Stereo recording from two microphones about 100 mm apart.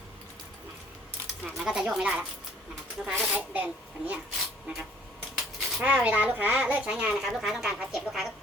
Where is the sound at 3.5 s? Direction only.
15° right (ahead or behind).